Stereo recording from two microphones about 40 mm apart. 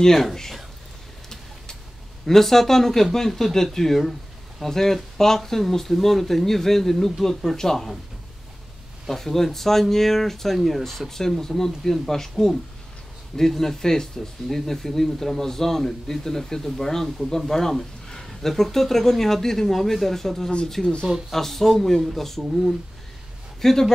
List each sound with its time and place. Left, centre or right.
0.0 s speech: centre
2.2 s speech: centre
9.1 s speech: centre